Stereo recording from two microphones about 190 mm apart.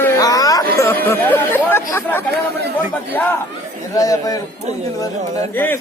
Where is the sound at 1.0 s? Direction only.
10° left (ahead or behind).